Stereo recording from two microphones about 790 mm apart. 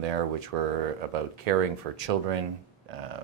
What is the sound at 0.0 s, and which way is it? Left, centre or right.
Speech, right.